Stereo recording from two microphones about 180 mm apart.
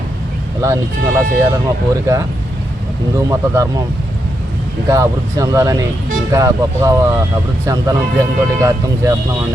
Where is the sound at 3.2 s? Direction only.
15° right (ahead or behind).